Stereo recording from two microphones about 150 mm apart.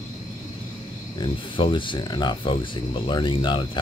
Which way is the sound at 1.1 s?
35° left (ahead or behind).